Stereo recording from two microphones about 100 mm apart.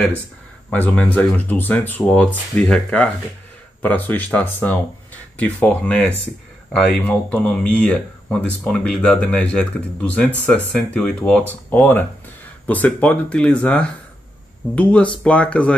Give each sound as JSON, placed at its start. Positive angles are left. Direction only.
{"t": 0.7, "sound": "speech", "side_deg": 15}
{"t": 3.8, "sound": "speech", "side_deg": 20}